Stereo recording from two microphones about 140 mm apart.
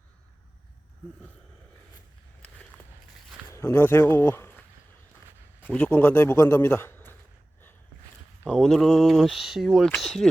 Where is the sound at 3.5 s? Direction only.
20° left (ahead or behind).